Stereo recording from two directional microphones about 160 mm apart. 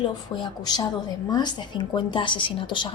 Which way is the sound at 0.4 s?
25° left (ahead or behind).